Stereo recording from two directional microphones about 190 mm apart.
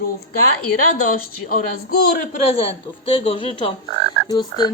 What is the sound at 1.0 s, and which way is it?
A woman's voice, 45° left (ahead or behind).